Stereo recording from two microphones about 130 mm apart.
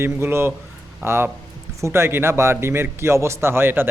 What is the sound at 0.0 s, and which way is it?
Speech, 20° right (ahead or behind).